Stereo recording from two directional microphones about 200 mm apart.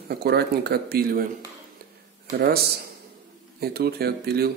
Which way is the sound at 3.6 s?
50° right (ahead or behind).